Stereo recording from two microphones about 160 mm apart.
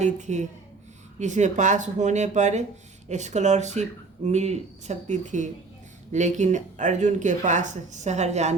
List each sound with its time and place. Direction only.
0.0 s speech: 50° right (ahead or behind)